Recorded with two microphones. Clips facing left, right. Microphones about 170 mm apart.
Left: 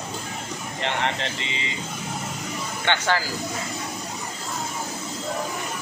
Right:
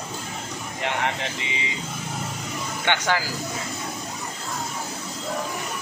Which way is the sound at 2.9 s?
10° right (ahead or behind).